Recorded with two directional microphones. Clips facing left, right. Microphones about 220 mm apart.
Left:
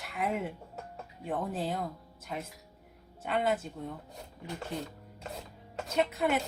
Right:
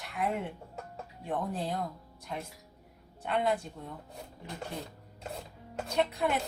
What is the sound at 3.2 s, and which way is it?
Speech, centre (ahead or behind).